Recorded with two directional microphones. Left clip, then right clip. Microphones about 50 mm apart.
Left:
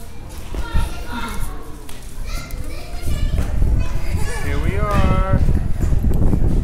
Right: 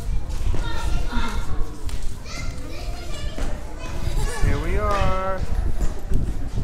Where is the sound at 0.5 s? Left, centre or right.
Centre.